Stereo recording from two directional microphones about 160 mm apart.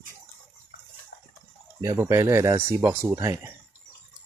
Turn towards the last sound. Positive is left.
turn(degrees=-20)  # may be behind; listen again after turning